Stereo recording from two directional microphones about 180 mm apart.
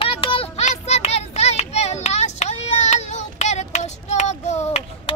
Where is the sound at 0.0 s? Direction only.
30° left (ahead or behind).